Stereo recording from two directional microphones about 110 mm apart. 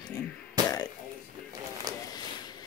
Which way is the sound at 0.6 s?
40° right (ahead or behind).